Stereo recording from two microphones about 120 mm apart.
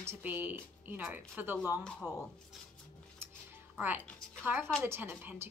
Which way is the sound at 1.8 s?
Centre (ahead or behind).